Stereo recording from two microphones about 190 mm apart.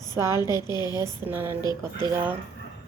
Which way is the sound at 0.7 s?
20° left (ahead or behind).